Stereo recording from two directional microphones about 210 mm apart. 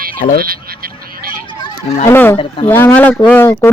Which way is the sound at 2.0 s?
10° left (ahead or behind).